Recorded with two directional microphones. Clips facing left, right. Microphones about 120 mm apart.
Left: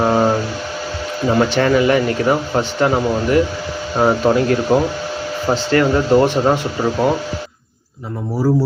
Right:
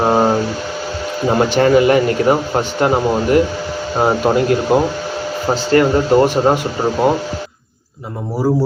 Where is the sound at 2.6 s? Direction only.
20° right (ahead or behind).